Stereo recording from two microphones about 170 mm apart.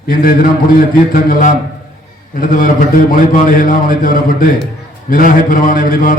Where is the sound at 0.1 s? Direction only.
60° left (ahead or behind).